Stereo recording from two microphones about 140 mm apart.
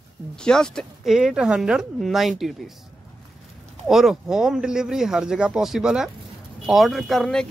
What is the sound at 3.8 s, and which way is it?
Speech, centre (ahead or behind).